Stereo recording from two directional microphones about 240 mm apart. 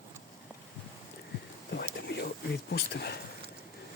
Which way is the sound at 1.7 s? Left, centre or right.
Left.